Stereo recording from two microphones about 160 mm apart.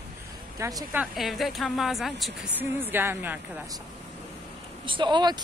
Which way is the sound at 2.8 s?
15° right (ahead or behind).